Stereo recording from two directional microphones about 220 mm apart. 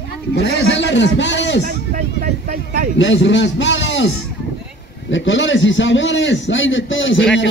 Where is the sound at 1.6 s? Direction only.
40° right (ahead or behind).